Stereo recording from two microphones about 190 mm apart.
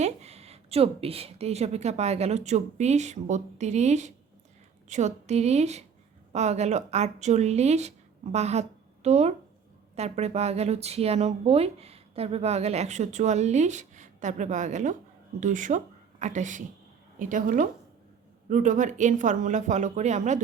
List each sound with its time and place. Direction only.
0.0 s speech: 35° right (ahead or behind)